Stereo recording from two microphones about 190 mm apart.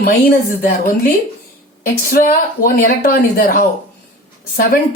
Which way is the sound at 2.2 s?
50° left (ahead or behind).